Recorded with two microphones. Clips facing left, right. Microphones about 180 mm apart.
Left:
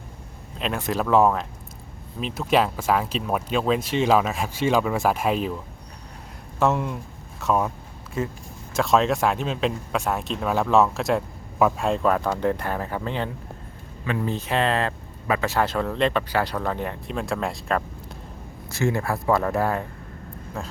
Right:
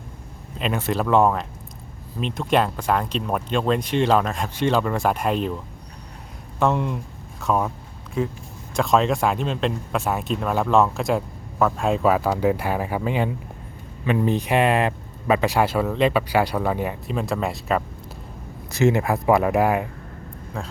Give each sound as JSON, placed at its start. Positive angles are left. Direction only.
{"t": 0.6, "sound": "speech", "side_deg": 0}
{"t": 6.6, "sound": "speech", "side_deg": 0}
{"t": 18.7, "sound": "speech", "side_deg": -20}
{"t": 20.6, "sound": "speech", "side_deg": 5}